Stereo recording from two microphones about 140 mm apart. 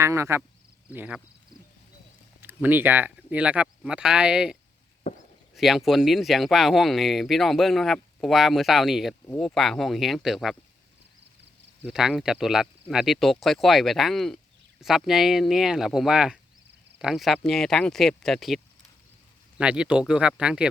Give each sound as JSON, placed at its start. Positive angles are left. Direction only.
{"t": 0.0, "sound": "speech", "side_deg": -20}
{"t": 2.4, "sound": "speech", "side_deg": -15}
{"t": 5.5, "sound": "speech", "side_deg": 0}
{"t": 11.8, "sound": "speech", "side_deg": -5}